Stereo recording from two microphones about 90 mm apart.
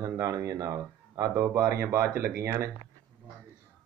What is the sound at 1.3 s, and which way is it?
Speech, 30° right (ahead or behind).